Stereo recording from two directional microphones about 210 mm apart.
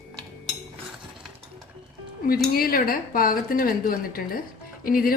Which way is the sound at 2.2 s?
45° left (ahead or behind).